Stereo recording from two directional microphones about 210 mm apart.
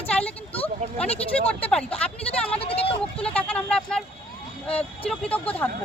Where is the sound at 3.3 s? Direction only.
5° left (ahead or behind).